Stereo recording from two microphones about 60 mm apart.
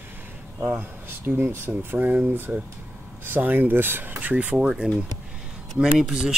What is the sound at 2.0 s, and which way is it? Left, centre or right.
Speech, right.